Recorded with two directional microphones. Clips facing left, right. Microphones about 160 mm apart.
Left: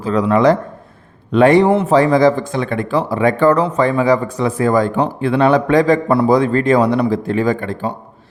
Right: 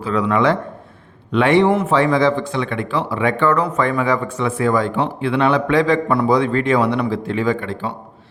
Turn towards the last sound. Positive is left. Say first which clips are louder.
# left 2 dB
turn(degrees=45)  # may be behind; listen again after turning